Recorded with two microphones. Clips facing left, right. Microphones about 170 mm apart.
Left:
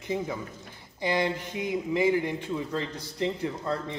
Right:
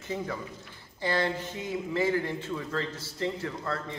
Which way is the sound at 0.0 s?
15° left (ahead or behind).